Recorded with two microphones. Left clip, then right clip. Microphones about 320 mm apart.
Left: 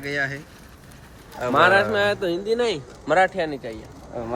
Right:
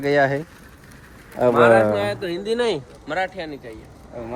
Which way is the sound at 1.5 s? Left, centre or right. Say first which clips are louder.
Right 1 dB; left.